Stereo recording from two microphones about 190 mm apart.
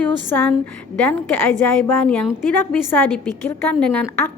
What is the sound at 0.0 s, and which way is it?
Speech, 10° left (ahead or behind).